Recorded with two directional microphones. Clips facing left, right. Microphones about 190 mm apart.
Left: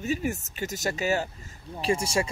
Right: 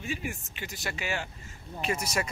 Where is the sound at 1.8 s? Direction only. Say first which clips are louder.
Left 5 dB; 30° left (ahead or behind).